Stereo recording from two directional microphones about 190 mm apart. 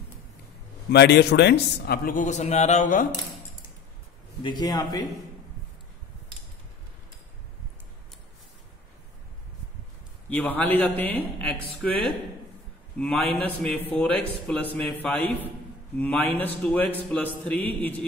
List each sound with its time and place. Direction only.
0.9 s a man's voice: 65° left (ahead or behind); by 3.1 s 40° left (ahead or behind)
4.4 s a man's voice: 25° left (ahead or behind)
10.3 s speech: 10° left (ahead or behind)
13.0 s speech: 10° left (ahead or behind)